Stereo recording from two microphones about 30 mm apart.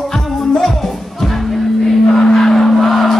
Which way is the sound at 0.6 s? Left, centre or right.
Centre.